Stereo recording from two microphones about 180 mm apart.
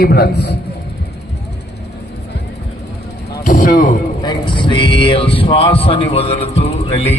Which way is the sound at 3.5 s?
50° left (ahead or behind).